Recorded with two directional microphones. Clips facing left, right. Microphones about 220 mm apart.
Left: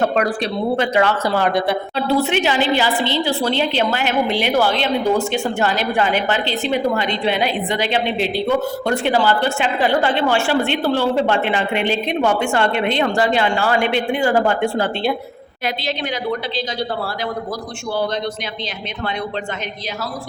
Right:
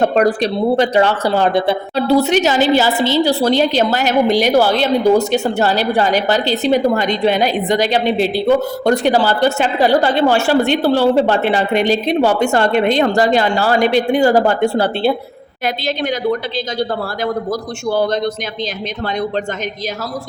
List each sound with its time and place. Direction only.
0.0 s a woman's voice: 35° right (ahead or behind)
2.0 s a woman's voice: 40° right (ahead or behind)